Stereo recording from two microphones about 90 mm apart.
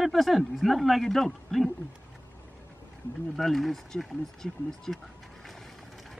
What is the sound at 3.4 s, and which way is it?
Speech, centre (ahead or behind).